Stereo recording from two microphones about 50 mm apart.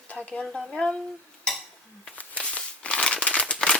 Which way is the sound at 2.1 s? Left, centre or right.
Left.